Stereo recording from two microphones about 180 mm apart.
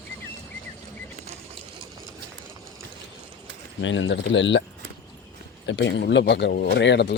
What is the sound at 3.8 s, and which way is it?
Speech, 90° left.